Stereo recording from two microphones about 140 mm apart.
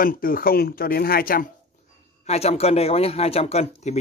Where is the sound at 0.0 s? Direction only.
90° left.